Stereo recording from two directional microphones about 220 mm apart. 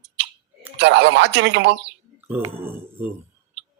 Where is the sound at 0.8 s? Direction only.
50° right (ahead or behind).